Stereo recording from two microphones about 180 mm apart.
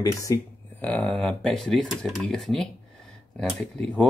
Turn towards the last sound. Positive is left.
turn(degrees=0)  # may be behind; listen again after turning